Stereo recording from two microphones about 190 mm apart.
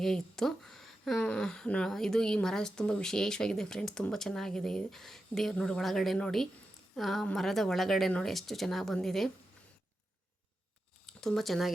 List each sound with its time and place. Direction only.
0.0 s speech: centre (ahead or behind)
11.0 s speech: centre (ahead or behind)